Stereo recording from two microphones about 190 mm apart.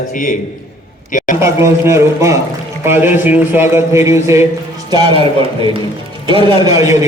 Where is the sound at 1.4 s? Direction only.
15° right (ahead or behind).